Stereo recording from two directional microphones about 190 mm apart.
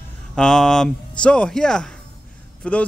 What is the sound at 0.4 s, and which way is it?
A man's voice, 5° left (ahead or behind).